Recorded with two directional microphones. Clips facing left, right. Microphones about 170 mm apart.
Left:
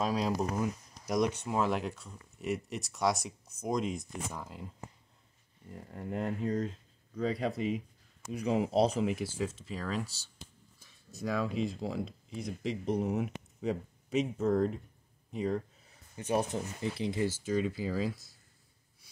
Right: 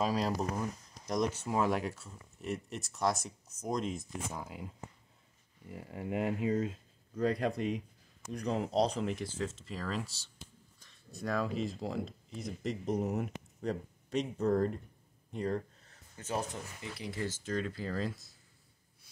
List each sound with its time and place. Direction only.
0.0 s speech: centre (ahead or behind)
15.3 s a sound: centre (ahead or behind)
16.5 s speech: 30° left (ahead or behind)
17.3 s speech: 10° left (ahead or behind)